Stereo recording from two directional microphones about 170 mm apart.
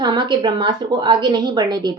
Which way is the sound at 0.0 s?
25° right (ahead or behind).